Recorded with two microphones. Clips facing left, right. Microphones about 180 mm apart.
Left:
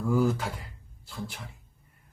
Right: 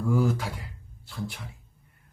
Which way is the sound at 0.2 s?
5° right (ahead or behind).